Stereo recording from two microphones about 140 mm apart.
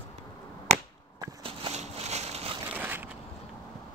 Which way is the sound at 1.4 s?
45° right (ahead or behind).